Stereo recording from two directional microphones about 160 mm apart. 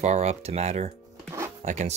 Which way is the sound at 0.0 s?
45° right (ahead or behind).